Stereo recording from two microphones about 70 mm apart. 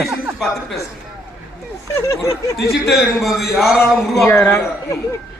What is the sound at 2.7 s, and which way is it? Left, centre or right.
A man's voice, centre.